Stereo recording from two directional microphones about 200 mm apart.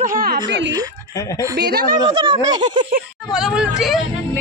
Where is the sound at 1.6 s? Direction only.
55° right (ahead or behind).